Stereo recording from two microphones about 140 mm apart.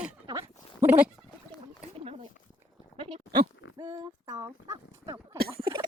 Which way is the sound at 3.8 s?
25° right (ahead or behind).